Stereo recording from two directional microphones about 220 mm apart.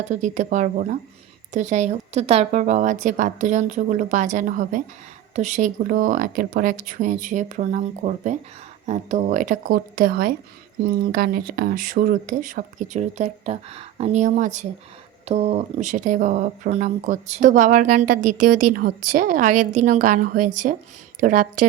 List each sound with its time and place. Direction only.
0.1 s speech: 35° right (ahead or behind)
18.2 s a woman's voice: 90° right
19.1 s speech: 35° right (ahead or behind)